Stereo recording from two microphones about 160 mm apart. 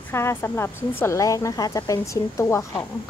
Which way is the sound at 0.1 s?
15° left (ahead or behind).